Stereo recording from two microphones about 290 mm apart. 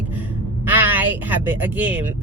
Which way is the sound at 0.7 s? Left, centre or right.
Centre.